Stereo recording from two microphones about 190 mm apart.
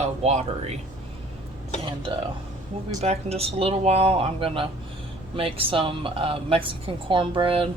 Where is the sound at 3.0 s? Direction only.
35° right (ahead or behind).